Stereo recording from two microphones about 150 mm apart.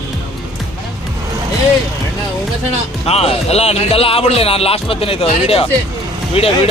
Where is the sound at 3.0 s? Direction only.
40° left (ahead or behind).